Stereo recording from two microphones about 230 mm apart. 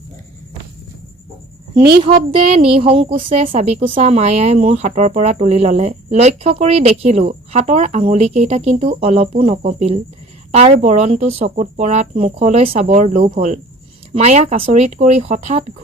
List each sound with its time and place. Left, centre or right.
2.0 s speech: right